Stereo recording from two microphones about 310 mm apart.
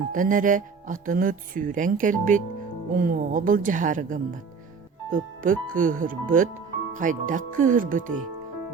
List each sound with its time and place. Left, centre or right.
0.1 s speech: right